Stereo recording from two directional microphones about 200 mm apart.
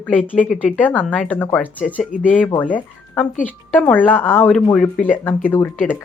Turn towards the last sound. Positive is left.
turn(degrees=10)  # may be behind; listen again after turning